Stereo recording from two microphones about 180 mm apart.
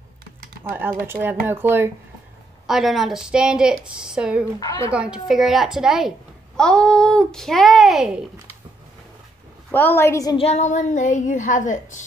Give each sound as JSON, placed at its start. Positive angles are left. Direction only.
{"t": 0.7, "sound": "speech", "side_deg": -10}
{"t": 2.6, "sound": "a woman's voice", "side_deg": 0}
{"t": 9.7, "sound": "a woman's voice", "side_deg": 10}
{"t": 10.3, "sound": "speech", "side_deg": 35}